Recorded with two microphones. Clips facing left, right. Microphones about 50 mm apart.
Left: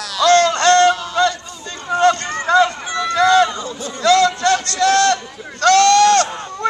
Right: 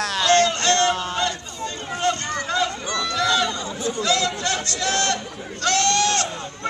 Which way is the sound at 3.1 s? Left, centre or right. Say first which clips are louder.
Left 9 dB; left.